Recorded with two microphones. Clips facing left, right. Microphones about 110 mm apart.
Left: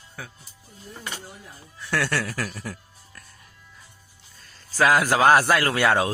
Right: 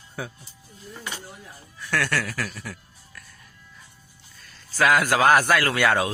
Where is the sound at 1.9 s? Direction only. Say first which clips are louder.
Even; 25° left (ahead or behind).